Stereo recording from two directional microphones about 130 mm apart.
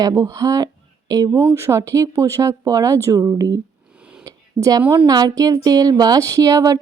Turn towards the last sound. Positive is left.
turn(degrees=-25)  # may be behind; listen again after turning